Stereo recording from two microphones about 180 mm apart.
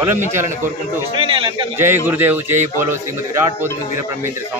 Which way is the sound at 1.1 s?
30° right (ahead or behind).